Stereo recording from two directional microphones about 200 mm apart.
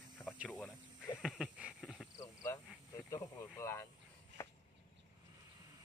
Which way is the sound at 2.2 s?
15° left (ahead or behind).